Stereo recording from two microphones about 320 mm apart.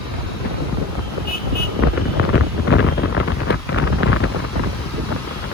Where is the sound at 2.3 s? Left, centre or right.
Left.